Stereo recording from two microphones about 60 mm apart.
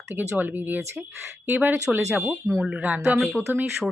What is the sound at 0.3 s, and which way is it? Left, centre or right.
Speech, right.